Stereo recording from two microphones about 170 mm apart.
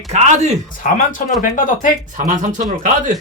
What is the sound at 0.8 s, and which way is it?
Speech, 50° left (ahead or behind).